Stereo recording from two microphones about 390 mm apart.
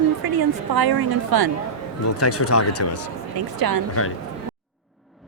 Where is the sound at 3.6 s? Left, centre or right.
Right.